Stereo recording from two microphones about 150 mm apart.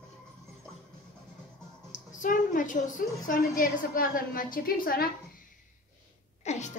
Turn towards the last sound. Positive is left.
turn(degrees=50)  # may be behind; listen again after turning